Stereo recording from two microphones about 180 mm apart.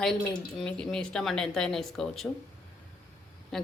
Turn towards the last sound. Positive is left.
turn(degrees=0)  # may be behind; listen again after turning